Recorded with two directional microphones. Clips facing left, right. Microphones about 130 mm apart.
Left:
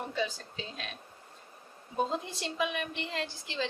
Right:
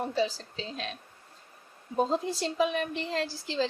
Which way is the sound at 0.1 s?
35° right (ahead or behind).